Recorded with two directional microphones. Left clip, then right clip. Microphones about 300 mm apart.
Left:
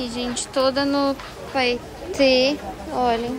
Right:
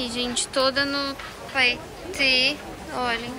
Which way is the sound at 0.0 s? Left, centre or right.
Centre.